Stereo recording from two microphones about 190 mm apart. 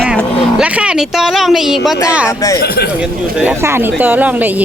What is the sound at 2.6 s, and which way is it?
Speech, 55° left (ahead or behind).